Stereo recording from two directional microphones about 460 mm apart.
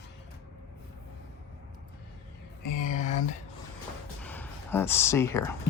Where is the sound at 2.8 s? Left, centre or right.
Centre.